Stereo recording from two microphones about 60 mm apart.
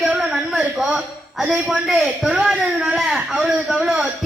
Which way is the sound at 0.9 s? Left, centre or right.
Centre.